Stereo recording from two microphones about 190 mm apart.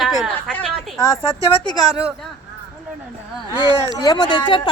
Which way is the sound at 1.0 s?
20° left (ahead or behind).